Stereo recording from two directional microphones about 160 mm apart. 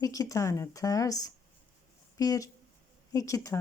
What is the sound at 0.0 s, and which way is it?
Speech, 20° left (ahead or behind).